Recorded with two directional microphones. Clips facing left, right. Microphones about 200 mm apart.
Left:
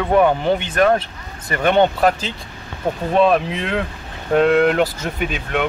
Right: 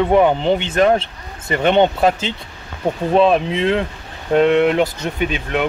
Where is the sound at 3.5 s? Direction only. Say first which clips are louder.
Right 5 dB; 30° right (ahead or behind).